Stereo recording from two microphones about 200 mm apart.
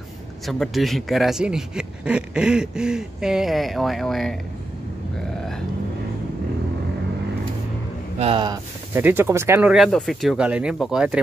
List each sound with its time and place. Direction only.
0.5 s speech: centre (ahead or behind)
8.2 s speech: 25° right (ahead or behind)
8.9 s speech: 10° right (ahead or behind)